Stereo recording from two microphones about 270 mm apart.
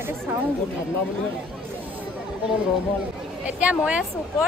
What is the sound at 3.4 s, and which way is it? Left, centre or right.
Speech, centre.